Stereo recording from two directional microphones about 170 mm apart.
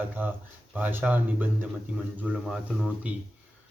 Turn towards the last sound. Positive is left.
turn(degrees=-5)  # may be behind; listen again after turning